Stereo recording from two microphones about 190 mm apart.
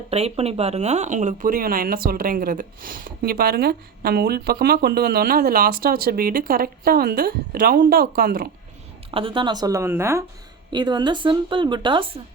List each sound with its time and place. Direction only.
0.1 s speech: 35° right (ahead or behind); by 8.4 s 50° right (ahead or behind)
9.1 s speech: 25° right (ahead or behind)